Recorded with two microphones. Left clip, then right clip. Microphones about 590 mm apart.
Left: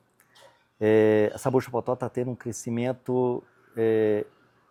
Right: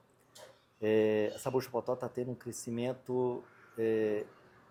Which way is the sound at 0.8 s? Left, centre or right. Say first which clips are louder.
Left 9 dB; left.